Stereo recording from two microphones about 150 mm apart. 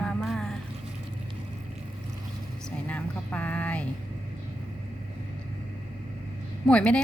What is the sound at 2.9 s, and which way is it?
Speech, 10° left (ahead or behind).